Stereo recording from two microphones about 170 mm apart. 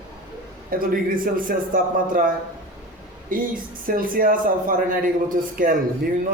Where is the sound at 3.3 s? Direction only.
55° right (ahead or behind).